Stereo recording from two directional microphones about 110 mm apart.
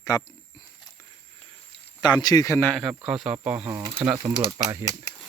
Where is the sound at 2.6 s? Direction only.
10° left (ahead or behind).